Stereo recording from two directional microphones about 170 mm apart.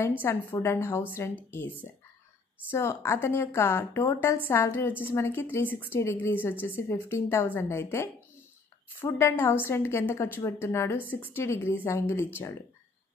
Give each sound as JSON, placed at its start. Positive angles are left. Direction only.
{"t": 0.2, "sound": "a woman's voice", "side_deg": 15}